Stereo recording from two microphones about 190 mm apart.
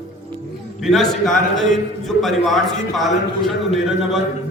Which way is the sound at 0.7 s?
Centre (ahead or behind).